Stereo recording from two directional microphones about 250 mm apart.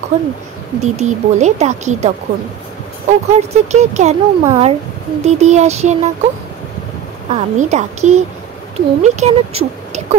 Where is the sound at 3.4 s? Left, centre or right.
Right.